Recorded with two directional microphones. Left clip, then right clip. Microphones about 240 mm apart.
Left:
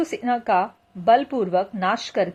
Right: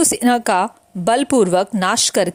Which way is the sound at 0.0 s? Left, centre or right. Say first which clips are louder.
Right 7 dB; right.